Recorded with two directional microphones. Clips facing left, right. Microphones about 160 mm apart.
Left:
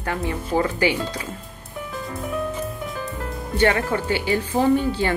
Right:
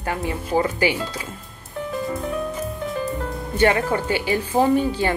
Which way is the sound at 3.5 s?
15° right (ahead or behind).